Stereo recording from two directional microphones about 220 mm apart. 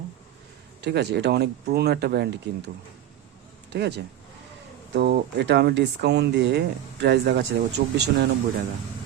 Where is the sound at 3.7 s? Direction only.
50° right (ahead or behind).